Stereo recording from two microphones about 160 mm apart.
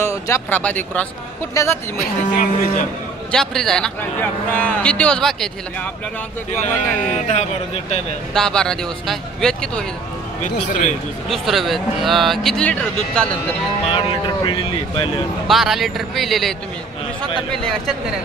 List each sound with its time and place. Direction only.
0.0 s a man's voice: 15° left (ahead or behind)
1.5 s a woman's voice: 20° left (ahead or behind)
2.3 s speech: 55° left (ahead or behind)
3.3 s a man's voice: 5° left (ahead or behind)
7.0 s speech: 45° left (ahead or behind)
8.3 s speech: 5° left (ahead or behind)
10.4 s speech: 50° left (ahead or behind)
11.2 s a man's voice: centre (ahead or behind)
13.8 s speech: 35° left (ahead or behind)
15.4 s speech: centre (ahead or behind)